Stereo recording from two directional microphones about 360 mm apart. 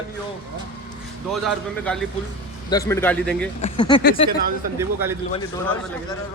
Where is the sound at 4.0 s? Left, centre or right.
Left.